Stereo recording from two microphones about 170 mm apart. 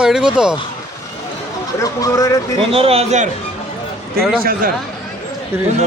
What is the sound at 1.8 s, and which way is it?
Speech, 20° left (ahead or behind).